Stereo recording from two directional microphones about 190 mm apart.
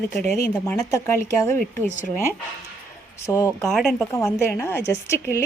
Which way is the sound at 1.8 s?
40° left (ahead or behind).